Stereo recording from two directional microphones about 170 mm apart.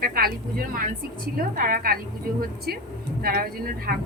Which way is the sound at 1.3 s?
60° right (ahead or behind).